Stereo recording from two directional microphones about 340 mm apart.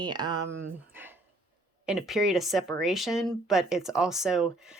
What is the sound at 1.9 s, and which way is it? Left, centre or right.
Speech, centre.